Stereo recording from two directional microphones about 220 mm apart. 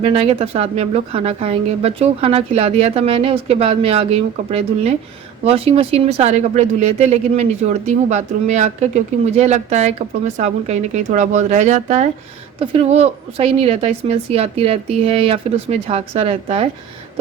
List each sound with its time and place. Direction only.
0.0 s speech: 25° right (ahead or behind)